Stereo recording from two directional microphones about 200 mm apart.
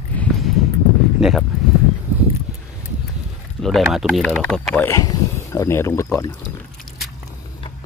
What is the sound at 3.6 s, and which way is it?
Speech, centre (ahead or behind).